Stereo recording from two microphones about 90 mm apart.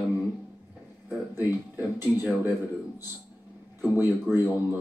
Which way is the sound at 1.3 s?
25° right (ahead or behind).